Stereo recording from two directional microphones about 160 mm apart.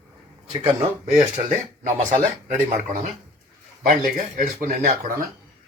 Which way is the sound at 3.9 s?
55° right (ahead or behind).